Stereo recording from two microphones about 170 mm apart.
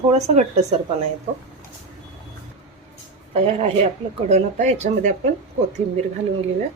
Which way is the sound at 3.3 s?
35° right (ahead or behind).